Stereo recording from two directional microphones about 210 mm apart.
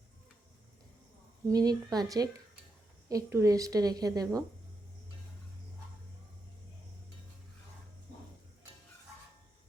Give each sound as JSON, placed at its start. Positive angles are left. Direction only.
{"t": 1.5, "sound": "a woman's voice", "side_deg": -20}